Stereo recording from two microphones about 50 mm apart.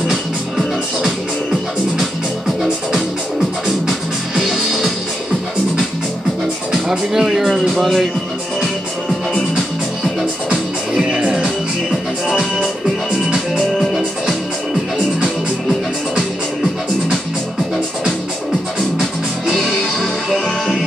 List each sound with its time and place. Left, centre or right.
0.1 s music: centre
4.4 s music: centre
6.7 s music: centre
7.4 s music: centre
10.5 s music: right
18.8 s music: centre